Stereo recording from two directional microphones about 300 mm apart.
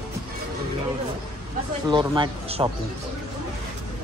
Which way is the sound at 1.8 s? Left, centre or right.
Centre.